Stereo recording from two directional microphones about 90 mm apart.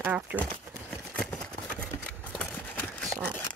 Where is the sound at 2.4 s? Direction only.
15° left (ahead or behind).